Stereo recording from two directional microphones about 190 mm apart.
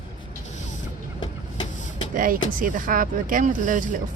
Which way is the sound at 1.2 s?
25° left (ahead or behind).